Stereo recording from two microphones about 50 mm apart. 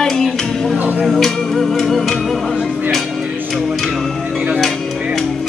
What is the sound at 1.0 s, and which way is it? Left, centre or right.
Music, centre.